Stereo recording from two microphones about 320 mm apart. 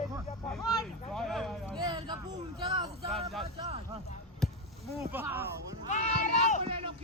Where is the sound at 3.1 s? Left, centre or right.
Centre.